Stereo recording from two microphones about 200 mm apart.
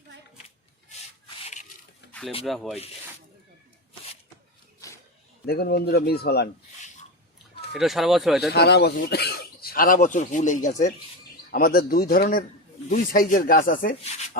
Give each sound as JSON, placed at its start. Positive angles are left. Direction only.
{"t": 2.4, "sound": "speech", "side_deg": 0}
{"t": 4.8, "sound": "a sound", "side_deg": 15}
{"t": 5.5, "sound": "speech", "side_deg": 50}
{"t": 7.7, "sound": "speech", "side_deg": 0}
{"t": 8.5, "sound": "speech", "side_deg": 55}
{"t": 11.5, "sound": "speech", "side_deg": 50}